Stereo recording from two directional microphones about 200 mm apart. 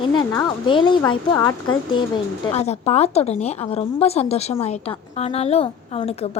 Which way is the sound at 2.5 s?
30° left (ahead or behind).